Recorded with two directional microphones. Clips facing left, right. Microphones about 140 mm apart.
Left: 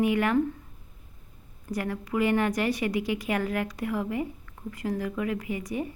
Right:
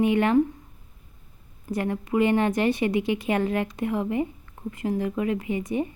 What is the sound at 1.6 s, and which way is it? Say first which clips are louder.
A woman's voice: right 4 dB; 25° right (ahead or behind).